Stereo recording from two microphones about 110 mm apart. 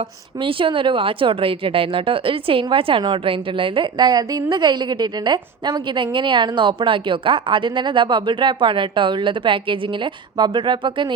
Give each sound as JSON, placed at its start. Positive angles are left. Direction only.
{"t": 0.0, "sound": "speech", "side_deg": -55}